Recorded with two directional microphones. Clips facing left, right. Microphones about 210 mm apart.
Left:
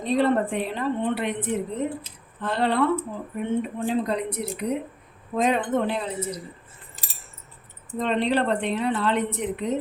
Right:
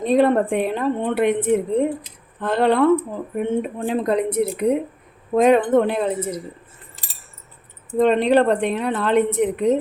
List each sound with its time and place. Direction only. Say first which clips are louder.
0.0 s a woman's voice: right 5 dB; 50° right (ahead or behind)
7.9 s a woman's voice: right 8 dB; 50° right (ahead or behind)